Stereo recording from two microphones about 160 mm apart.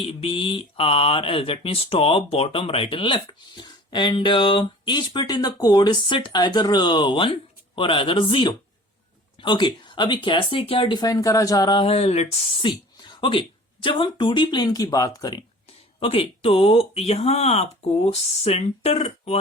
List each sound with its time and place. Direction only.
0.0 s speech: 35° left (ahead or behind)
13.1 s a sound: 30° left (ahead or behind)
13.8 s speech: 30° left (ahead or behind)
16.0 s speech: 35° left (ahead or behind)